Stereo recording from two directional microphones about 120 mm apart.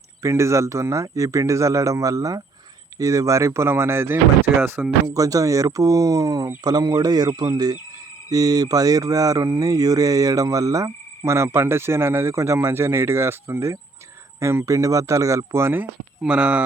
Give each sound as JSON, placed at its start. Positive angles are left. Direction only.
{"t": 0.2, "sound": "speech", "side_deg": -25}
{"t": 5.1, "sound": "speech", "side_deg": -30}